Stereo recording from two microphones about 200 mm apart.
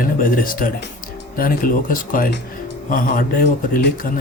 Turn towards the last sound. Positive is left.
turn(degrees=45)  # may be behind; listen again after turning